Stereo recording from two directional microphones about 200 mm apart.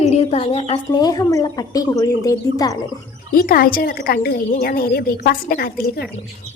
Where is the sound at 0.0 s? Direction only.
30° left (ahead or behind); by 2.7 s 15° left (ahead or behind).